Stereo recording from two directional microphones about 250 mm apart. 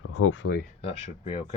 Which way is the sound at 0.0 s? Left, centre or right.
Left.